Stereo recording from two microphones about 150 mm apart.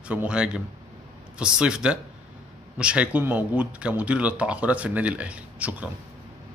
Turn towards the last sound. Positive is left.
turn(degrees=-10)  # may be behind; listen again after turning